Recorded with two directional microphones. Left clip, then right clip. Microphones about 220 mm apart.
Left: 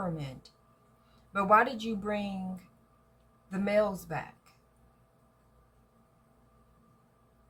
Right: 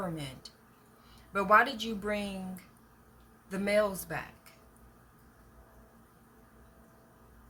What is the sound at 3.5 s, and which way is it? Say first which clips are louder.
Speech: even; 10° right (ahead or behind).